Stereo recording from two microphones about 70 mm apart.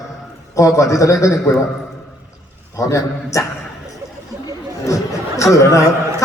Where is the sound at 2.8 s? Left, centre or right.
Left.